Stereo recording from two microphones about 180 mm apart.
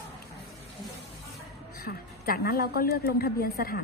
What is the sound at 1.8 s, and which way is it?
A woman's voice, 55° left (ahead or behind).